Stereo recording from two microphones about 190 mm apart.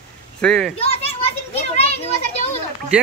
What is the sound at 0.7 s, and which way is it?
Children playing, 30° left (ahead or behind).